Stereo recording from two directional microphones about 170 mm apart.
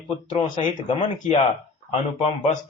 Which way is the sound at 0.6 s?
45° left (ahead or behind).